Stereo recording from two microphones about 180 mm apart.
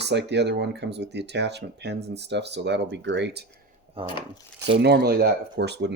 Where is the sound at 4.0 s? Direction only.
30° right (ahead or behind).